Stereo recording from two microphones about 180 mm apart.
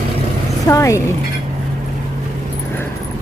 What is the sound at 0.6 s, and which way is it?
Speech, 15° left (ahead or behind).